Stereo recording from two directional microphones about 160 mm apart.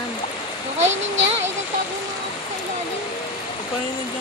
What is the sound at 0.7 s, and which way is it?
Speech, 45° right (ahead or behind).